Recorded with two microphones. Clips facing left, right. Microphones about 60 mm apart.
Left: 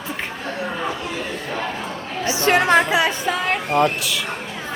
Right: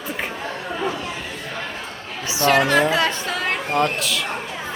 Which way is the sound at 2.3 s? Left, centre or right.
Left.